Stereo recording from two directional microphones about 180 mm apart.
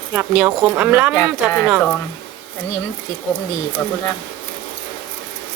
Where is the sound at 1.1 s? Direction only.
15° left (ahead or behind).